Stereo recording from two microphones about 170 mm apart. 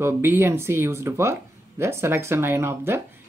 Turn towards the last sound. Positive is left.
turn(degrees=-15)  # may be behind; listen again after turning